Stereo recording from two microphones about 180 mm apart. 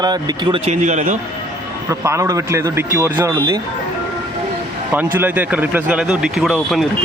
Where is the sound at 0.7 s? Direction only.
40° right (ahead or behind).